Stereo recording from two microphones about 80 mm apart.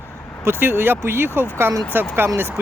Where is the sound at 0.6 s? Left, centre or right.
Right.